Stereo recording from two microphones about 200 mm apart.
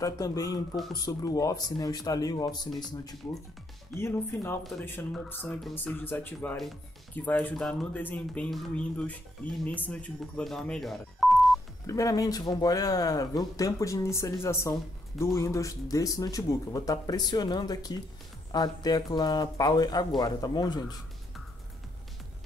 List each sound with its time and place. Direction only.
0.0 s speech: 15° left (ahead or behind)
3.9 s speech: 10° left (ahead or behind)
11.8 s speech: 15° left (ahead or behind)